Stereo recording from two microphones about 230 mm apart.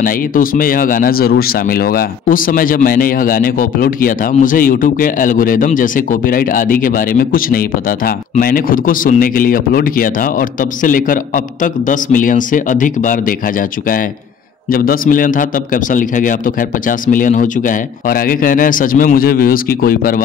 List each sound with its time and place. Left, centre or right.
0.0 s speech: left